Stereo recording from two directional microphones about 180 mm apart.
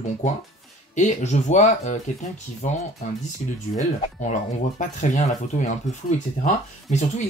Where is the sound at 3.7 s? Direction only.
45° left (ahead or behind).